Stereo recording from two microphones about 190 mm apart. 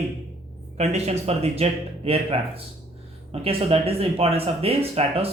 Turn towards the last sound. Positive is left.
turn(degrees=-30)  # may be behind; listen again after turning